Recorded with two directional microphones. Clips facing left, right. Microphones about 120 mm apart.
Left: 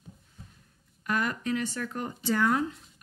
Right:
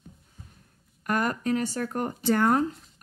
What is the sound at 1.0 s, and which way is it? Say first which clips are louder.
A woman's voice: right 3 dB; 45° right (ahead or behind).